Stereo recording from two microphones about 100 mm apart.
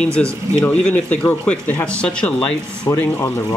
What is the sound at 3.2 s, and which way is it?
Speech, 30° left (ahead or behind).